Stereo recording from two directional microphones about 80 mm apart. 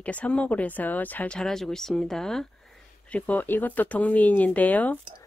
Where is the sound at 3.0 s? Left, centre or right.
Centre.